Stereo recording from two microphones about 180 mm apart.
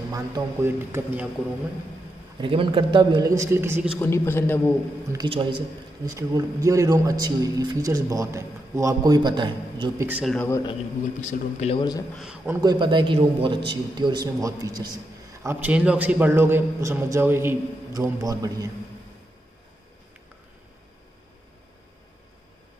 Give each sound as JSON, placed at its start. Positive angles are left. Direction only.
{"t": 0.1, "sound": "a man's voice", "side_deg": -15}
{"t": 2.3, "sound": "speech", "side_deg": -30}
{"t": 4.0, "sound": "a man's voice", "side_deg": 15}
{"t": 5.1, "sound": "speech", "side_deg": -25}
{"t": 10.0, "sound": "a man's voice", "side_deg": -10}
{"t": 10.3, "sound": "a man's voice", "side_deg": 10}
{"t": 11.1, "sound": "a man's voice", "side_deg": 40}
{"t": 12.2, "sound": "a man's voice", "side_deg": -5}
{"t": 12.6, "sound": "speech", "side_deg": -25}
{"t": 15.4, "sound": "a man's voice", "side_deg": -10}